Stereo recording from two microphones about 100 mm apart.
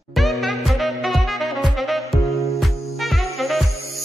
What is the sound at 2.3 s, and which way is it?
Music, 30° left (ahead or behind).